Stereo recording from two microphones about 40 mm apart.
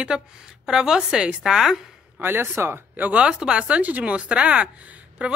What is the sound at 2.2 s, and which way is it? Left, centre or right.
Speech, right.